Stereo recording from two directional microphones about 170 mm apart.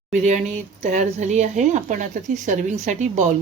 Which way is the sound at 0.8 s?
45° right (ahead or behind).